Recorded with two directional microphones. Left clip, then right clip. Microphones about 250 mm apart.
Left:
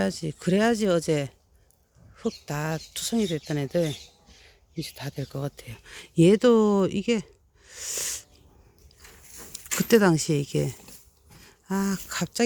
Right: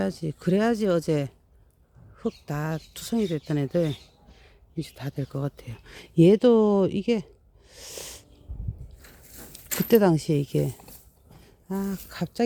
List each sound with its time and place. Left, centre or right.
0.0 s speech: centre
7.7 s a sound: centre
9.0 s biting: right
9.7 s speech: centre